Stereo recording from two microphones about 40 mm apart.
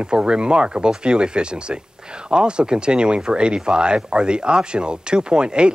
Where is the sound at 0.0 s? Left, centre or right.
Right.